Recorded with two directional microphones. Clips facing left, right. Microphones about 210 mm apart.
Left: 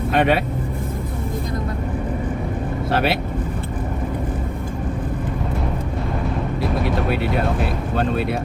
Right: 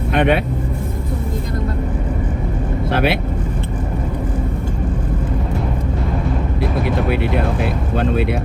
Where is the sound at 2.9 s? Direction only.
55° right (ahead or behind).